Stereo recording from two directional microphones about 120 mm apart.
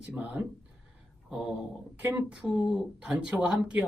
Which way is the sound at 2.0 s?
10° right (ahead or behind).